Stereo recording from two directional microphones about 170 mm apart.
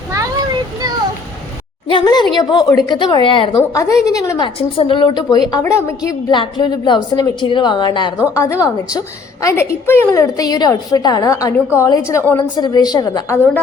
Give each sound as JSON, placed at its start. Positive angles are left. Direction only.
{"t": 1.9, "sound": "a woman's voice", "side_deg": 25}